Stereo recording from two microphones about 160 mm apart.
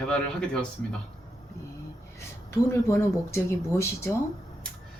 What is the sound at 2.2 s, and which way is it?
Speech, 15° left (ahead or behind).